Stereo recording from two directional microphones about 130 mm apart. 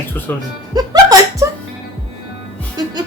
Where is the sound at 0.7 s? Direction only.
30° right (ahead or behind).